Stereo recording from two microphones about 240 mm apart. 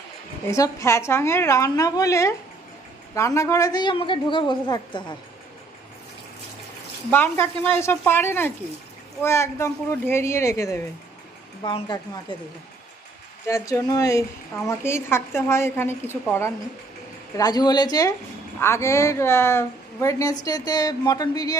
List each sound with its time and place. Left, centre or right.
0.5 s a woman's voice: centre
7.1 s a woman's voice: centre
13.5 s a woman's voice: centre